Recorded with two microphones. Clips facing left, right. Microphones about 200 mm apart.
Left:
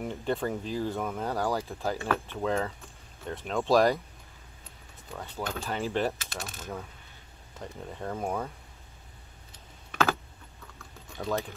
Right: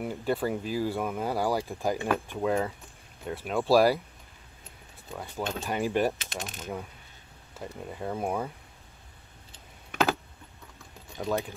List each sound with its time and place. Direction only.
0.0 s speech: 5° right (ahead or behind)
5.1 s speech: 10° right (ahead or behind)
9.8 s typing: 15° right (ahead or behind)
11.1 s speech: 15° right (ahead or behind)